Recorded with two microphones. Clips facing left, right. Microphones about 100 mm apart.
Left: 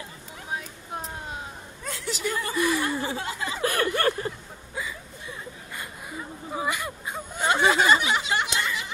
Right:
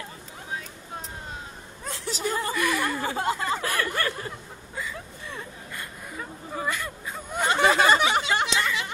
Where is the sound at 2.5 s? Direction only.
25° left (ahead or behind).